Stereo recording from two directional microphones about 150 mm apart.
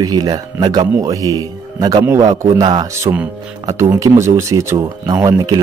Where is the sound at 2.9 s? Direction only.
20° right (ahead or behind).